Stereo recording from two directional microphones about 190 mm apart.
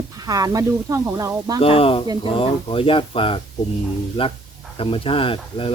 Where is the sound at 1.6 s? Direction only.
30° left (ahead or behind).